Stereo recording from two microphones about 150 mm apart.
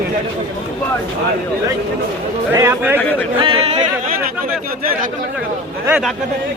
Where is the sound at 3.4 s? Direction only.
40° right (ahead or behind).